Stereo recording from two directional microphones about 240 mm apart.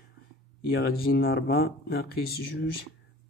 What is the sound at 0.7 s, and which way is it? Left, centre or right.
Speech, left.